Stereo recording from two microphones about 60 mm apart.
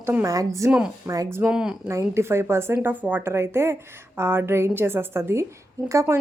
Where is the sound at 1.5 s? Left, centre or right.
Centre.